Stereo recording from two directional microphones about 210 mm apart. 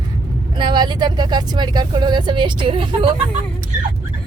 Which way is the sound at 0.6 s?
20° right (ahead or behind).